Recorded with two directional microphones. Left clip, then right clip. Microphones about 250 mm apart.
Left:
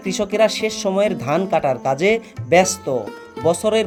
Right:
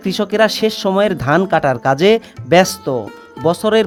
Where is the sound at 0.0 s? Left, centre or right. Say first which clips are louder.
Right 3 dB; right.